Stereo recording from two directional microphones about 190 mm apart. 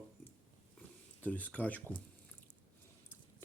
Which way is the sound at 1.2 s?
10° left (ahead or behind).